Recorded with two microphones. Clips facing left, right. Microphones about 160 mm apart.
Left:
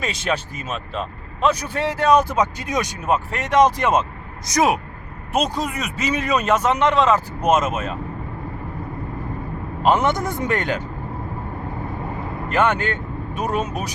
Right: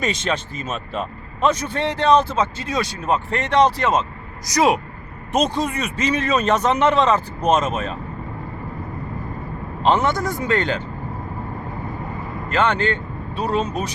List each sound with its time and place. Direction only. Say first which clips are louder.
0.0 s speech: right 1 dB; 5° left (ahead or behind)
5.3 s speech: right 2 dB; 5° left (ahead or behind)
9.8 s speech: even; 15° left (ahead or behind)
12.5 s speech: even; 10° left (ahead or behind)